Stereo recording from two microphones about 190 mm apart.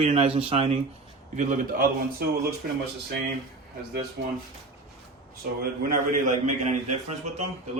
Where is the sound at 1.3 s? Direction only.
40° right (ahead or behind).